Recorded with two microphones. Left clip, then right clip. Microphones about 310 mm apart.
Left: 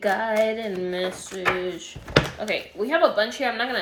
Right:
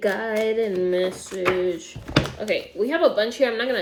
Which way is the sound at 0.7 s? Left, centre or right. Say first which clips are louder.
Right 5 dB; centre.